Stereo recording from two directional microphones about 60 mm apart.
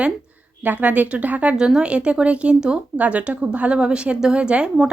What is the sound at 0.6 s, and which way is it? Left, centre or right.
Speech, right.